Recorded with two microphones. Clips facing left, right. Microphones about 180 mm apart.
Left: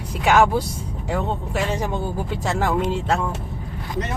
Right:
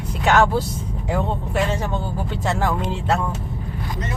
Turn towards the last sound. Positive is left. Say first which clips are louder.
# left 1 dB
turn(degrees=5)  # may be behind; listen again after turning